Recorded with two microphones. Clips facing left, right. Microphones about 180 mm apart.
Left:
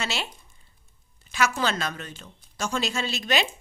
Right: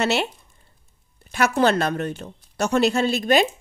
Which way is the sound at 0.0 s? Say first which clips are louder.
Right 10 dB; 60° right (ahead or behind).